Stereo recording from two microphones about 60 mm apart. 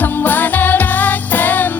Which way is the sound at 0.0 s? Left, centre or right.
Left.